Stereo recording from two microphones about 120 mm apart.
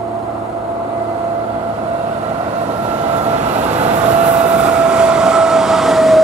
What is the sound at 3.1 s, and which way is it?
Train, 70° right (ahead or behind).